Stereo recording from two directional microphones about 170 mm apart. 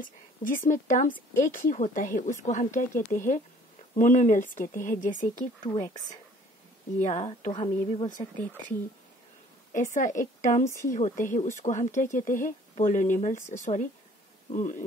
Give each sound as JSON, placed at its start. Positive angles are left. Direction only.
{"t": 0.0, "sound": "speech", "side_deg": 55}
{"t": 5.6, "sound": "speech", "side_deg": 20}
{"t": 7.0, "sound": "speech", "side_deg": 40}
{"t": 7.5, "sound": "speech", "side_deg": 30}
{"t": 9.9, "sound": "speech", "side_deg": 50}
{"t": 10.6, "sound": "speech", "side_deg": 15}
{"t": 10.9, "sound": "speech", "side_deg": 50}